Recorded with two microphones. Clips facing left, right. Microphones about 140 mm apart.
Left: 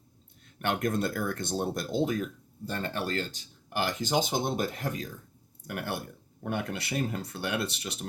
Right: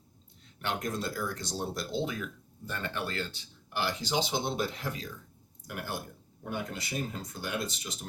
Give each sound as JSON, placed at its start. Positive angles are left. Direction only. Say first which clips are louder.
{"t": 0.4, "sound": "speech", "louder": "left 5 dB", "side_deg": 55}
{"t": 5.6, "sound": "speech", "louder": "left 3 dB", "side_deg": 65}